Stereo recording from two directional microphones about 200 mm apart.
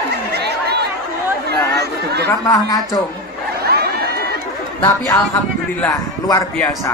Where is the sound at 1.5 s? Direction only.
55° right (ahead or behind).